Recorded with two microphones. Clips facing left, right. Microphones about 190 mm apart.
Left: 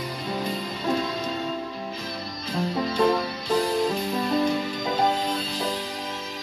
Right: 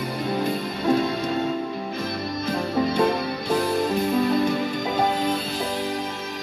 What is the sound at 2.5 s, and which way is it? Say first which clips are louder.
Music: right 2 dB; 55° right (ahead or behind).